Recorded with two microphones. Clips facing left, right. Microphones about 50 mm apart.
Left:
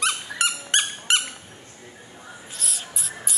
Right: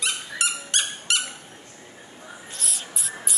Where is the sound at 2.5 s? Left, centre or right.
Centre.